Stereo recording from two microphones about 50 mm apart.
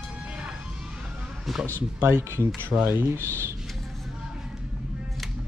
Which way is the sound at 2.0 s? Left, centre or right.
Right.